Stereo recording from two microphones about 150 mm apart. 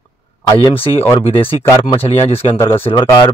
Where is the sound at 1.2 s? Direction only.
35° left (ahead or behind).